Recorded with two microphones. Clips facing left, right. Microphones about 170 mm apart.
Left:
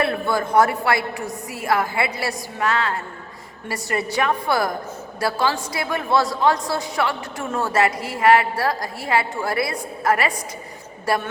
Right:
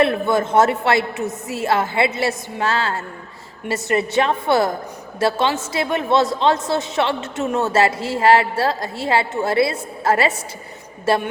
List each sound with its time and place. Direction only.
0.0 s a woman's voice: 20° right (ahead or behind)